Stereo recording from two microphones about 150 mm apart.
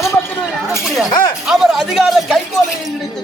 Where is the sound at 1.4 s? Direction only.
Centre (ahead or behind).